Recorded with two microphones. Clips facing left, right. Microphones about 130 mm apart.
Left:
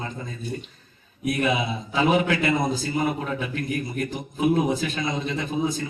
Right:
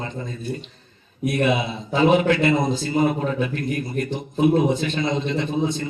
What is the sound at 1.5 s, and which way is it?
A man's voice, 30° right (ahead or behind).